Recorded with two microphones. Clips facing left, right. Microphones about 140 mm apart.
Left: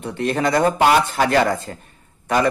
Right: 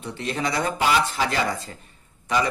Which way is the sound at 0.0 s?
50° left (ahead or behind).